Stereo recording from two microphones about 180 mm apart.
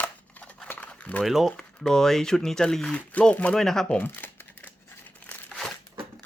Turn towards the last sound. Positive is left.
turn(degrees=-5)  # may be behind; listen again after turning